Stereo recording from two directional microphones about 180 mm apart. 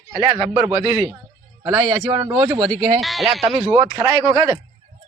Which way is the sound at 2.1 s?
20° right (ahead or behind).